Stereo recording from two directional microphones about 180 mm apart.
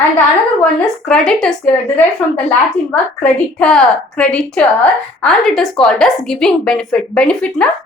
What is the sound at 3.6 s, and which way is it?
A woman's voice, 5° left (ahead or behind).